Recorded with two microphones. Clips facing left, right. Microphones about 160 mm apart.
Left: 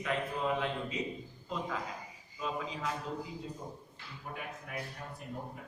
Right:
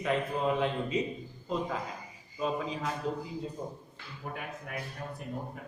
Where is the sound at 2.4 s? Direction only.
40° right (ahead or behind).